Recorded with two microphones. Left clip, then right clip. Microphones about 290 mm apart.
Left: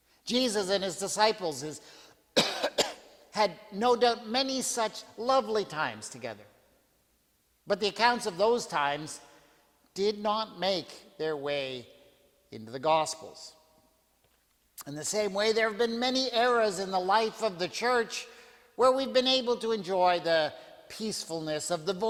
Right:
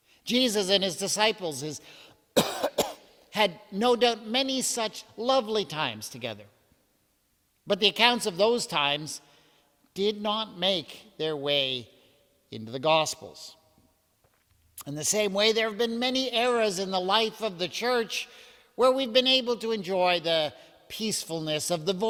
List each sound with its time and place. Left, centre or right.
0.3 s a man's voice: right
7.7 s a man's voice: right
9.9 s speech: right
14.8 s a man's voice: right